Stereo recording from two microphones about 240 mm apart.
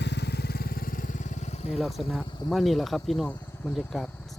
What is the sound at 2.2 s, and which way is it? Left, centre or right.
Speech, centre.